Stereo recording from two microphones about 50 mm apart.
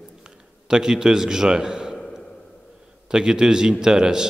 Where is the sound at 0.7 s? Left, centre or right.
Centre.